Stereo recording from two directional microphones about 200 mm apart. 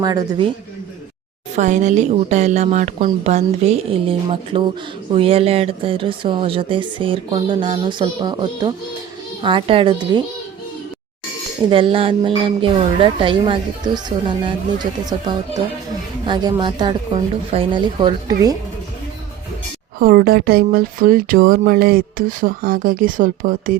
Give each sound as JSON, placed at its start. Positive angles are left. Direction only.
{"t": 0.0, "sound": "speech", "side_deg": -20}
{"t": 1.5, "sound": "a woman's voice", "side_deg": -35}
{"t": 11.7, "sound": "speech", "side_deg": -25}
{"t": 20.0, "sound": "speech", "side_deg": -45}